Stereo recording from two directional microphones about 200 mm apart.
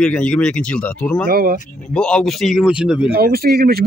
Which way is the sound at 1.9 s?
5° left (ahead or behind).